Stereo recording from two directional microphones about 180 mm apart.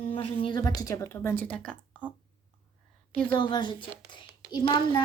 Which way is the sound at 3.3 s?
25° left (ahead or behind).